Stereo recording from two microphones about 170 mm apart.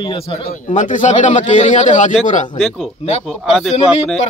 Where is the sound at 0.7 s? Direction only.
50° left (ahead or behind).